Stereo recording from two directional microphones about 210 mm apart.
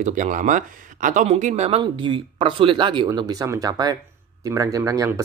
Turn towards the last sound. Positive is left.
turn(degrees=-15)  # may be behind; listen again after turning